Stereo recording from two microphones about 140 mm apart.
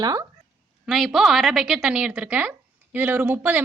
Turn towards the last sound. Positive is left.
turn(degrees=-10)  # may be behind; listen again after turning